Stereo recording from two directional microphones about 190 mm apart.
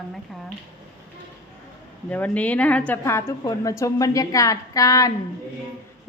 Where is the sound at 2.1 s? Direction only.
10° left (ahead or behind).